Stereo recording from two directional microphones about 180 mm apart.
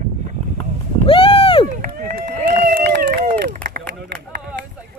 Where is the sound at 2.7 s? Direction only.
55° right (ahead or behind).